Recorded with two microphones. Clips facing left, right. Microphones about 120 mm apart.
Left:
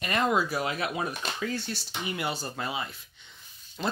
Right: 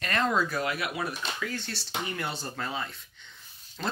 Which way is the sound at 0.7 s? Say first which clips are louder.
Left 2 dB; 25° left (ahead or behind).